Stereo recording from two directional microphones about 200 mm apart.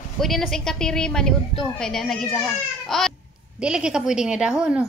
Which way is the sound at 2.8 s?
Centre (ahead or behind).